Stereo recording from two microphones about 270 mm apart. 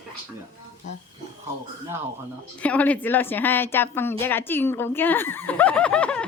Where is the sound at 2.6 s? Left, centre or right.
Centre.